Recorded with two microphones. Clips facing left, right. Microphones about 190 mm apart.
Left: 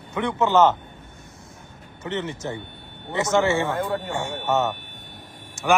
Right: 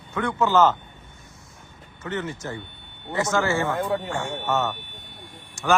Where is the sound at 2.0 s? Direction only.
20° left (ahead or behind).